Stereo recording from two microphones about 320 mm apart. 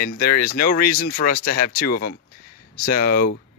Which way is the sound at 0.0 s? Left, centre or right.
Left.